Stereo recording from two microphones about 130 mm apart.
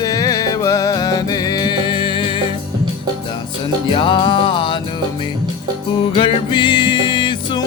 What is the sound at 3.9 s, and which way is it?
Music, 40° left (ahead or behind).